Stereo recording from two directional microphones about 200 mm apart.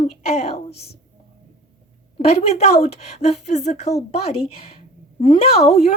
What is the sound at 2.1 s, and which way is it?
A woman's voice, 30° left (ahead or behind).